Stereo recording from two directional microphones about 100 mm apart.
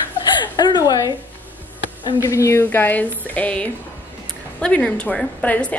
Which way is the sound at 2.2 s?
30° left (ahead or behind).